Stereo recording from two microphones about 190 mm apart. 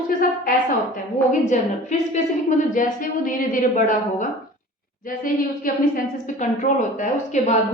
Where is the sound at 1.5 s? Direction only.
40° left (ahead or behind).